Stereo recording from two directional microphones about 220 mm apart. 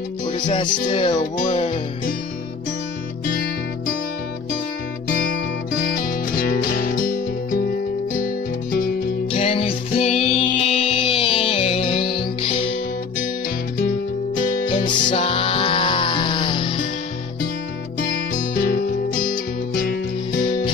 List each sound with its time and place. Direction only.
0.5 s music: 30° left (ahead or behind)
5.8 s music: 40° left (ahead or behind)
8.7 s music: 40° left (ahead or behind)
9.4 s music: 25° left (ahead or behind)
13.7 s music: 40° left (ahead or behind)
14.7 s music: 25° left (ahead or behind)
18.3 s music: 40° left (ahead or behind)